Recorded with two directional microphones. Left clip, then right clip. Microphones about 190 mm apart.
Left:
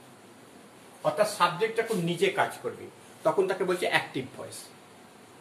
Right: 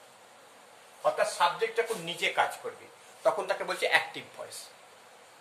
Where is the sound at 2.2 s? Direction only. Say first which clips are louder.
Left 1 dB; 25° right (ahead or behind).